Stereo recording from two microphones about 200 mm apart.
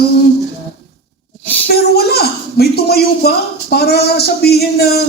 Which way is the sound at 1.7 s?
55° left (ahead or behind).